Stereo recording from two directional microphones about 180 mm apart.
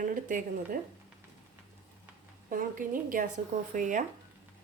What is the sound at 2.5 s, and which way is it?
A woman's voice, 45° right (ahead or behind).